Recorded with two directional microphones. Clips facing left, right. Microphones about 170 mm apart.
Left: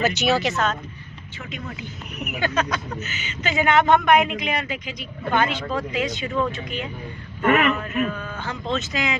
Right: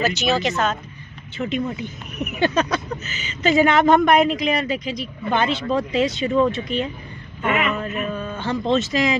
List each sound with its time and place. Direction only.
0.1 s speech: 10° left (ahead or behind)
2.4 s speech: 35° right (ahead or behind)
7.4 s a man's voice: 50° left (ahead or behind)
7.8 s speech: 25° right (ahead or behind)